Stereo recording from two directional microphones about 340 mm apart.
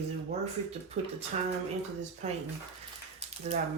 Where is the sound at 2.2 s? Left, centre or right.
Centre.